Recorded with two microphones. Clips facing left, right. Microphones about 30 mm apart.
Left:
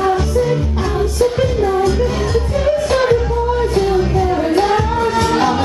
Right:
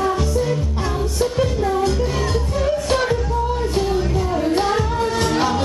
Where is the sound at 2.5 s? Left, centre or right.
Left.